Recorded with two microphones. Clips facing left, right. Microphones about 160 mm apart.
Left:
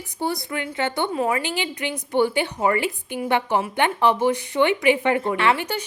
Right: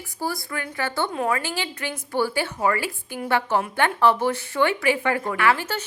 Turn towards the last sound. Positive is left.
turn(degrees=15)  # may be behind; listen again after turning